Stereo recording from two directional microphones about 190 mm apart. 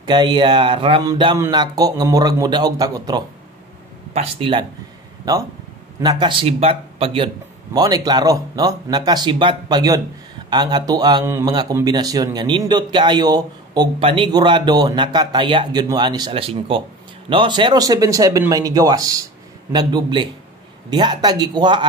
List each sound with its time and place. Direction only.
0.0 s speech: 25° right (ahead or behind)
4.1 s speech: 30° right (ahead or behind)